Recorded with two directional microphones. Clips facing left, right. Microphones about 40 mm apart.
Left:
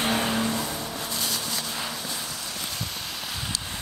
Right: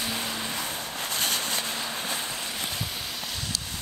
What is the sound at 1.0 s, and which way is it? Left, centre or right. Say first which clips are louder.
Vehicle: right 5 dB; right.